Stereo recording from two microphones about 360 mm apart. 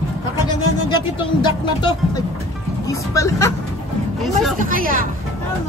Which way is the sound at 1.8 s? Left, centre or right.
Centre.